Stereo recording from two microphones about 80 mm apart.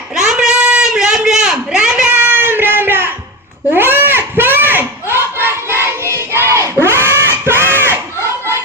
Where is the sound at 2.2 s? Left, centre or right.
Right.